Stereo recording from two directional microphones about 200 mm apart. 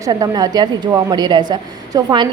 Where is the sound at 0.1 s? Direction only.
20° right (ahead or behind).